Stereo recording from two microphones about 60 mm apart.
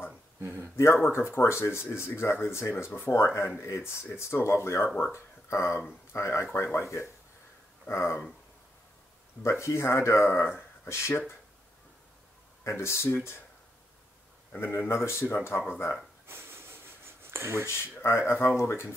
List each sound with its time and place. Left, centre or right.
0.4 s speech: right
0.7 s speech: left
4.8 s speech: left
7.9 s speech: left
9.4 s speech: left
12.6 s speech: left
14.6 s speech: left
16.3 s a sound: right
17.6 s speech: left